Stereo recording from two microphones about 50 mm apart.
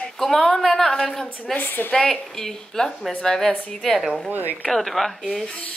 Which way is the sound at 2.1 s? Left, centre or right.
Centre.